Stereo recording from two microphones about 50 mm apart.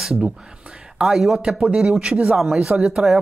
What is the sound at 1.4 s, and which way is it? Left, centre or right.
Speech, right.